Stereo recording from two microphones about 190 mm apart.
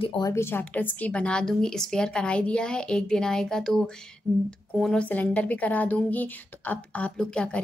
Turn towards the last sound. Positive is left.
turn(degrees=5)  # may be behind; listen again after turning